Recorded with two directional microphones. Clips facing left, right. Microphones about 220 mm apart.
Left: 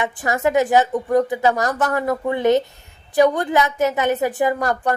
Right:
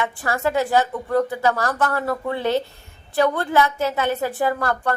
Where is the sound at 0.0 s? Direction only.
15° left (ahead or behind).